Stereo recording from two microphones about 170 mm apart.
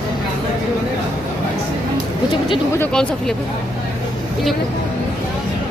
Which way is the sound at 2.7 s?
10° left (ahead or behind).